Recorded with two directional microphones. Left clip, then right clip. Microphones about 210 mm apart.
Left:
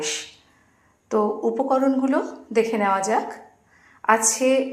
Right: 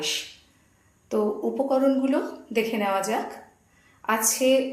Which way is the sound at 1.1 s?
15° left (ahead or behind).